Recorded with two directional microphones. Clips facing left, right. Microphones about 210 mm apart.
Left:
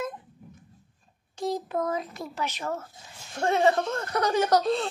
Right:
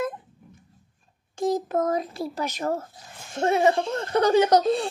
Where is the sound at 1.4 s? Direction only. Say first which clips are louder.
Right 5 dB; 45° right (ahead or behind).